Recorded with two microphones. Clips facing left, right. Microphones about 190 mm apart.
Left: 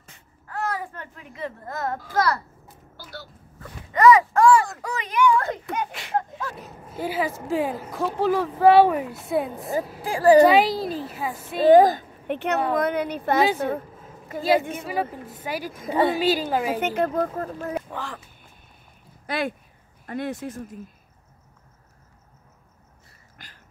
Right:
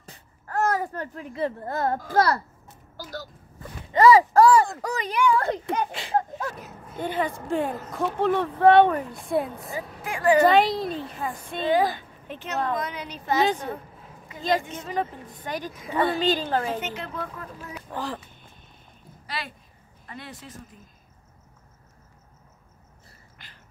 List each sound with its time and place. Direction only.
0.0 s babbling: 40° right (ahead or behind)
2.1 s a child's voice: 35° right (ahead or behind)
3.0 s a sound: 40° right (ahead or behind)
3.9 s speech: 30° right (ahead or behind)
6.5 s speech: centre (ahead or behind)
10.0 s a woman's voice: 35° left (ahead or behind)
10.5 s speech: centre (ahead or behind)
11.6 s speech: 45° left (ahead or behind)
12.3 s a woman's voice: 65° left (ahead or behind)
14.8 s a woman's voice: 10° left (ahead or behind)
16.8 s speech: 50° left (ahead or behind)
17.9 s a child's voice: 35° right (ahead or behind)
19.2 s speech: 50° left (ahead or behind)
23.3 s a sound: 45° left (ahead or behind)